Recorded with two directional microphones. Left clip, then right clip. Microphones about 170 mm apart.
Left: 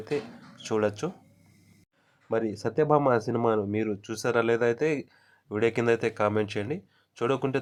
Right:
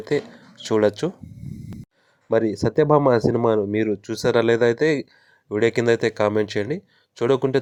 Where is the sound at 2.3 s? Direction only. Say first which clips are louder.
Right 8 dB; 25° right (ahead or behind).